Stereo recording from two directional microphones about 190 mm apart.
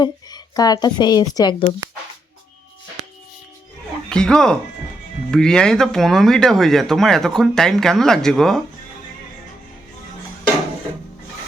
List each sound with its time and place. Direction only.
0.0 s speech: 20° left (ahead or behind)
4.1 s speech: 5° left (ahead or behind)